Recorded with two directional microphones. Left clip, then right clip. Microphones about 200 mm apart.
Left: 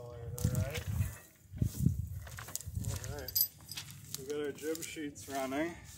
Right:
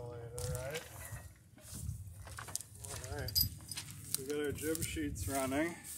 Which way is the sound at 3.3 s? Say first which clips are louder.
Right 4 dB; 5° left (ahead or behind).